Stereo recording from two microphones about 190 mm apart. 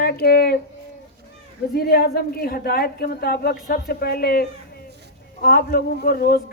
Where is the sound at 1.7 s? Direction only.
55° left (ahead or behind).